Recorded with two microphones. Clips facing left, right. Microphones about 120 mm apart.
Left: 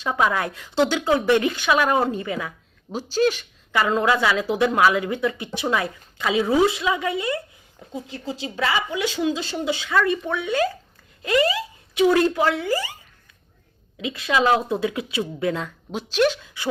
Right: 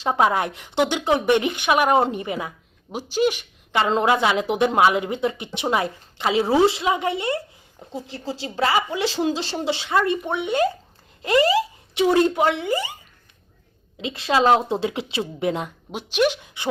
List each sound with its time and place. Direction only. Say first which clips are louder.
0.0 s speech: right 2 dB; 30° right (ahead or behind)
14.0 s speech: right 2 dB; 30° right (ahead or behind)